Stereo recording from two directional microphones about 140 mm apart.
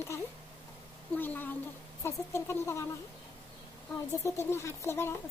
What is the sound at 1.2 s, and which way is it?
Speech, 15° left (ahead or behind).